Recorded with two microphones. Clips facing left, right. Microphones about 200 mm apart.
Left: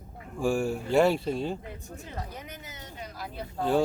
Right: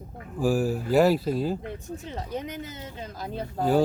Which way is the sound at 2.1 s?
20° right (ahead or behind).